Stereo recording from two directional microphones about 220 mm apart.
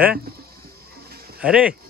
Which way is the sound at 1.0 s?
45° right (ahead or behind).